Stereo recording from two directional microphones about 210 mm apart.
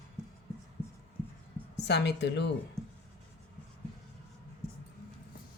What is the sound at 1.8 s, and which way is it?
Speech, 55° left (ahead or behind).